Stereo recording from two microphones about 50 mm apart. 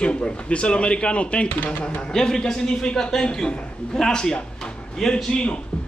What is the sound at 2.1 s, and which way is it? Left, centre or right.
A man's voice, centre.